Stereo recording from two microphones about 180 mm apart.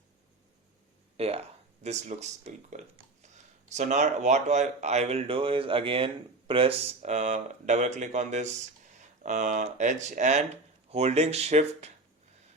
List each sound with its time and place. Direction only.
1.1 s speech: 35° right (ahead or behind)